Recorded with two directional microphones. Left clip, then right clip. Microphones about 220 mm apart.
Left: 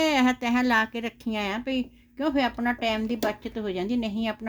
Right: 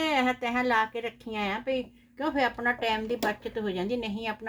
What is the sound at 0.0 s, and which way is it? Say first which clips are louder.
A woman's voice: left 3 dB; 40° left (ahead or behind).